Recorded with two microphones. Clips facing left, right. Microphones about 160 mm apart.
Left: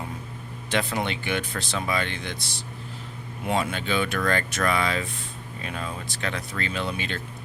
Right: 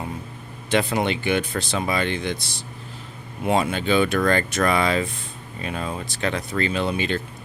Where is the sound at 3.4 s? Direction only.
20° right (ahead or behind); by 6.7 s 40° right (ahead or behind).